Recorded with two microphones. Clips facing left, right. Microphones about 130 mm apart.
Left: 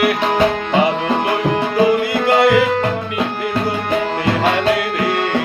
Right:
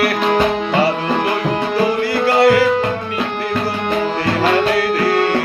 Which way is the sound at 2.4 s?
20° left (ahead or behind).